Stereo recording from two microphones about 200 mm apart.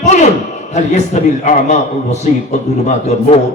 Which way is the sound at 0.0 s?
35° left (ahead or behind).